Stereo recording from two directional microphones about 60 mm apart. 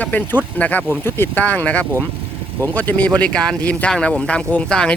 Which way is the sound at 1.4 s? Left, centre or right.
Left.